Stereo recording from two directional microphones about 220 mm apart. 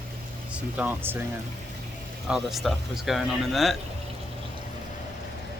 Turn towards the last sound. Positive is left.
turn(degrees=0)  # may be behind; listen again after turning